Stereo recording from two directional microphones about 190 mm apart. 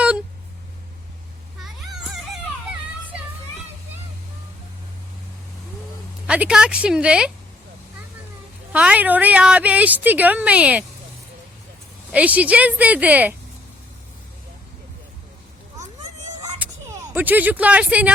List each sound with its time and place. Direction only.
6.2 s a woman's voice: 5° right (ahead or behind)
8.7 s a woman's voice: 5° right (ahead or behind)
12.1 s a woman's voice: 5° right (ahead or behind)
16.6 s a sound: 10° right (ahead or behind)